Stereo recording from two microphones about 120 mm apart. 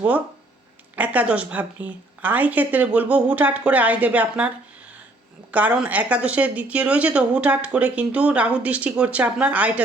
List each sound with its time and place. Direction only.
0.9 s speech: 10° right (ahead or behind)